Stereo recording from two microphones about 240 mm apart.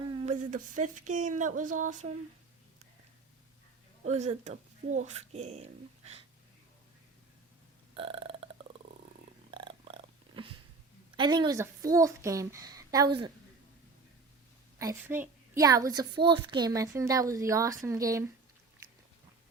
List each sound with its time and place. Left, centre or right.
0.2 s speech: right
4.0 s speech: right
7.9 s burping: right
9.5 s purr: centre
11.2 s a woman's voice: centre
14.8 s a woman's voice: centre